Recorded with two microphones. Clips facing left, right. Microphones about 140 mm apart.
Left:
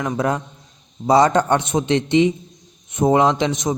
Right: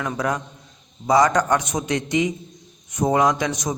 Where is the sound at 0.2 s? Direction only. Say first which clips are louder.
Left 3 dB; 30° left (ahead or behind).